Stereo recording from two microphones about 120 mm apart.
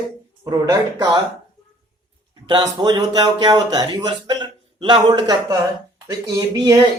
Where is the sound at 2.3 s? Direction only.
35° right (ahead or behind).